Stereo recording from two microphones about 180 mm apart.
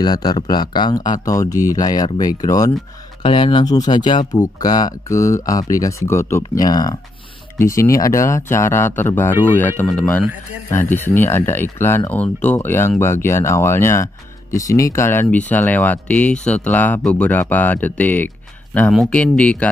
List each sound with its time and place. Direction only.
0.0 s speech: 25° left (ahead or behind)
3.2 s speech: 30° left (ahead or behind); by 19.7 s 5° left (ahead or behind)